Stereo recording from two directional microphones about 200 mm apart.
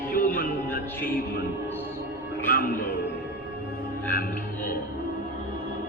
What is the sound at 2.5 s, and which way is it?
Speech, 45° left (ahead or behind).